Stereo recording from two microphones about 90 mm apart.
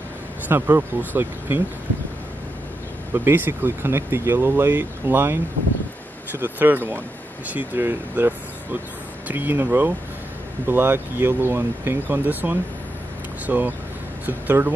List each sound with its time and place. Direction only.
0.5 s speech: 25° right (ahead or behind)
3.3 s speech: 25° right (ahead or behind)